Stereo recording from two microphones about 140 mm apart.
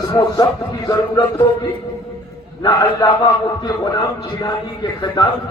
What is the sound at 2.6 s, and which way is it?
A man's voice, 25° left (ahead or behind).